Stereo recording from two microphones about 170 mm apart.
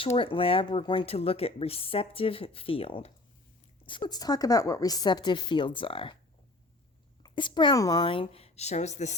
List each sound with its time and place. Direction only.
0.0 s speech: 30° left (ahead or behind)
4.1 s speech: 20° left (ahead or behind)
7.2 s a woman's voice: 25° left (ahead or behind); by 9.1 s 40° left (ahead or behind)